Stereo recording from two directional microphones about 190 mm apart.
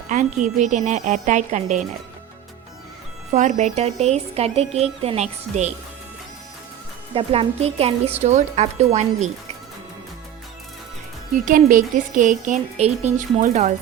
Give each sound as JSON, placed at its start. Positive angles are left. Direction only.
{"t": 0.1, "sound": "a woman's voice", "side_deg": -40}
{"t": 3.3, "sound": "a woman's voice", "side_deg": -40}
{"t": 7.1, "sound": "a woman's voice", "side_deg": -30}
{"t": 11.4, "sound": "a woman's voice", "side_deg": -45}